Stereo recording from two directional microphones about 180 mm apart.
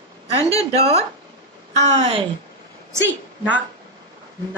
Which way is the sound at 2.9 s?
10° right (ahead or behind).